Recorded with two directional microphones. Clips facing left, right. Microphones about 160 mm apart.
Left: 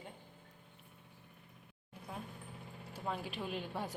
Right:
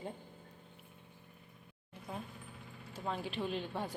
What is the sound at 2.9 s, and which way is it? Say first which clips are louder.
Speech: right 2 dB; 10° left (ahead or behind).